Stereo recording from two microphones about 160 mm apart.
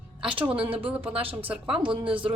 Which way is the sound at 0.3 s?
10° right (ahead or behind).